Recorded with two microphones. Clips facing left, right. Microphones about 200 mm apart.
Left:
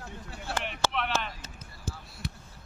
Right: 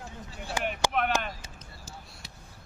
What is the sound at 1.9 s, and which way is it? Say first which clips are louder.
Basketball bounce: left 8 dB; 60° left (ahead or behind).